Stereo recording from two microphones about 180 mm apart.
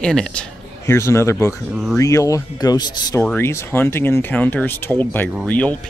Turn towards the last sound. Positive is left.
turn(degrees=10)  # may be behind; listen again after turning